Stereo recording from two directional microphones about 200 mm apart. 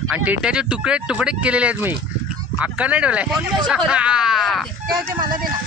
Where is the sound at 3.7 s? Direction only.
5° right (ahead or behind).